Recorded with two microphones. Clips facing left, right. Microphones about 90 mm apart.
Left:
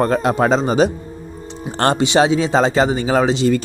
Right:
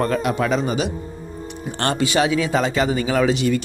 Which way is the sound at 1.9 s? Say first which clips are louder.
Left 3 dB; 25° left (ahead or behind).